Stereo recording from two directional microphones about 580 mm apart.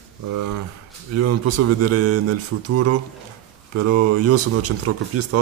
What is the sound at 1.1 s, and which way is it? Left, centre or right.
Speech, right.